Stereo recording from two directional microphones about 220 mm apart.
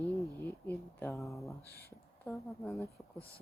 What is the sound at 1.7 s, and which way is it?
Speech, 45° left (ahead or behind).